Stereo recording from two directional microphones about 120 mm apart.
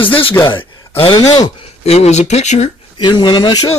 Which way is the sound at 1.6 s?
60° left (ahead or behind).